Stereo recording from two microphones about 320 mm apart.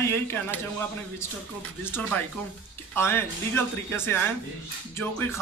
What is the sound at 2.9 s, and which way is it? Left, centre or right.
A man's voice, centre.